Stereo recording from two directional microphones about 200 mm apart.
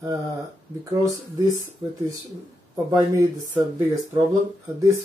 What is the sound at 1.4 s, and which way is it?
Speech, 20° right (ahead or behind).